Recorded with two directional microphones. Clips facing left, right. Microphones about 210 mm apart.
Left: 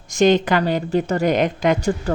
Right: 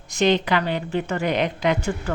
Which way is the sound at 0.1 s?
45° left (ahead or behind).